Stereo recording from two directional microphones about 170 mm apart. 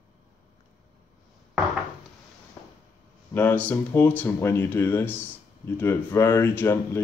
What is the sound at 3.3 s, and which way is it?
Speech, 10° left (ahead or behind).